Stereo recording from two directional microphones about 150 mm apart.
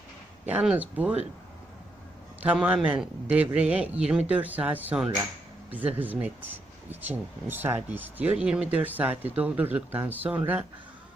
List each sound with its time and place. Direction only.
0.4 s speech: 10° right (ahead or behind)
2.4 s speech: 10° right (ahead or behind)